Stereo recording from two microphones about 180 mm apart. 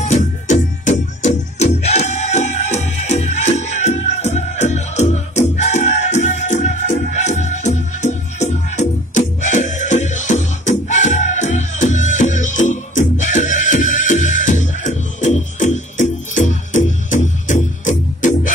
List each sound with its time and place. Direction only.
0.0 s music: 40° left (ahead or behind)